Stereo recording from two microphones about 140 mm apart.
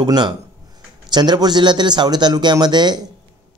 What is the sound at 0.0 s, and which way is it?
Speech, 30° right (ahead or behind).